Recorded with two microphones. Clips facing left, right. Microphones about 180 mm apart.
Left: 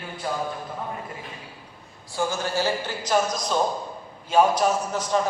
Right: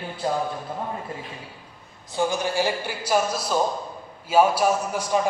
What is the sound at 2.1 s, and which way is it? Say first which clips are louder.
A man's voice: right 2 dB; 15° right (ahead or behind).